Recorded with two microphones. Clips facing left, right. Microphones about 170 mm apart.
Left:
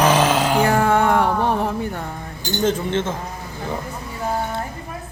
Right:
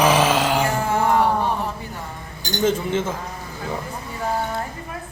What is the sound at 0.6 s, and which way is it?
Music, 60° left (ahead or behind).